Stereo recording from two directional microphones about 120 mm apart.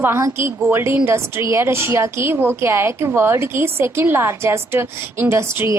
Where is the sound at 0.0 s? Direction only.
20° right (ahead or behind).